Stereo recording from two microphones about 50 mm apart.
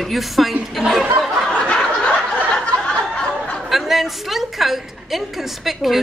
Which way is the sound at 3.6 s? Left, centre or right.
Centre.